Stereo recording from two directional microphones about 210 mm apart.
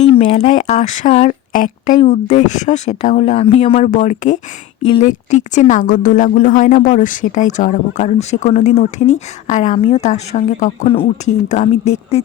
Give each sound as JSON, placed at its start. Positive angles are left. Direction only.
{"t": 0.0, "sound": "a woman's voice", "side_deg": 25}